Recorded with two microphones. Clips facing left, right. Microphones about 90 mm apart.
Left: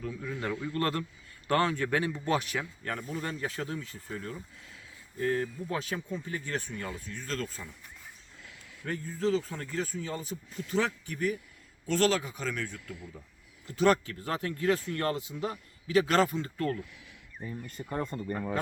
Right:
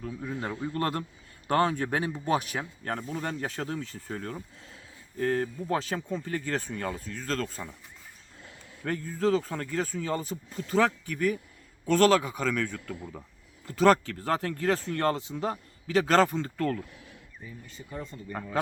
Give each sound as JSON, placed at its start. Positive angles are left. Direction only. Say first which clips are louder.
{"t": 0.0, "sound": "a man's voice", "louder": "right 1 dB", "side_deg": -30}
{"t": 2.6, "sound": "a man's voice", "louder": "right 2 dB", "side_deg": -30}
{"t": 5.9, "sound": "speech", "louder": "right 3 dB", "side_deg": -35}
{"t": 6.2, "sound": "speech", "louder": "right 4 dB", "side_deg": -80}
{"t": 6.9, "sound": "speech", "louder": "right 4 dB", "side_deg": -35}
{"t": 7.6, "sound": "speech", "louder": "right 5 dB", "side_deg": -60}
{"t": 8.8, "sound": "a man's voice", "louder": "right 3 dB", "side_deg": -50}
{"t": 10.1, "sound": "speech", "louder": "right 6 dB", "side_deg": -60}
{"t": 10.5, "sound": "a man's voice", "louder": "right 5 dB", "side_deg": -40}
{"t": 13.7, "sound": "speech", "louder": "right 4 dB", "side_deg": -40}
{"t": 17.4, "sound": "speech", "louder": "left 6 dB", "side_deg": 55}